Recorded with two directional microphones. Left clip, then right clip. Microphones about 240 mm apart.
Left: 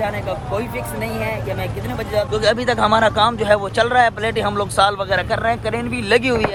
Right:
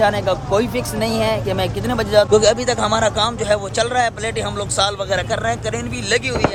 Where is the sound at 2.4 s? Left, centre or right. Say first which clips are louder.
Even; centre.